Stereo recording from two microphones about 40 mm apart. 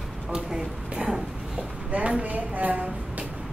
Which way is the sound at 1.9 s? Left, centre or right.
Right.